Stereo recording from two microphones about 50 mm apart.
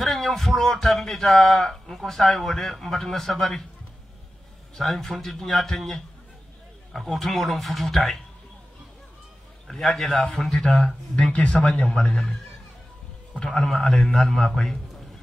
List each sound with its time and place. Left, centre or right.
0.0 s speech: centre
4.7 s speech: centre
9.7 s a man's voice: centre
11.3 s a man's voice: centre
11.6 s a man's voice: centre
13.7 s a man's voice: centre